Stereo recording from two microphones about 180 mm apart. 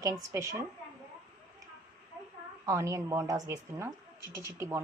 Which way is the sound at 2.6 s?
15° right (ahead or behind).